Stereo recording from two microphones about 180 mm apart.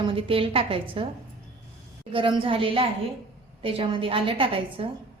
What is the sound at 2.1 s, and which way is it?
A woman's voice, 30° right (ahead or behind).